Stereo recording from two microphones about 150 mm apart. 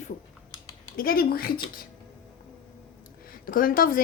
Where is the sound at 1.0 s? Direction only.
80° left.